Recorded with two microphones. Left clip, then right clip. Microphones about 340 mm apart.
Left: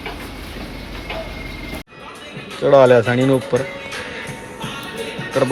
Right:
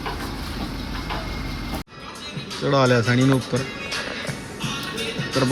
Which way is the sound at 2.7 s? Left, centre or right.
Left.